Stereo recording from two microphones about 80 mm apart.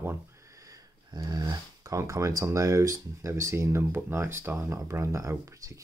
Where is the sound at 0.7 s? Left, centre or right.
Right.